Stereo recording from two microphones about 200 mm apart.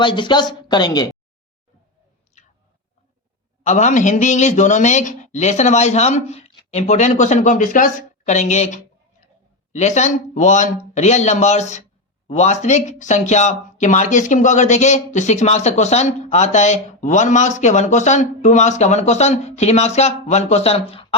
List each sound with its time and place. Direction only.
0.0 s a woman's voice: 25° left (ahead or behind)
3.6 s speech: 35° left (ahead or behind)